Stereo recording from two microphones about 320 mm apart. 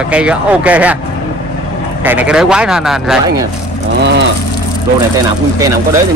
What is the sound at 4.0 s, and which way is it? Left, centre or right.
Vehicle, right.